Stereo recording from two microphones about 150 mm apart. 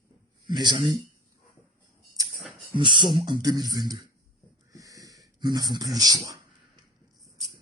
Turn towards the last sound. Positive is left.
turn(degrees=-25)  # may be behind; listen again after turning